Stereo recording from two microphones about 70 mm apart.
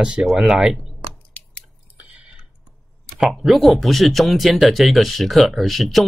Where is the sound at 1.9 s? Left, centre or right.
Centre.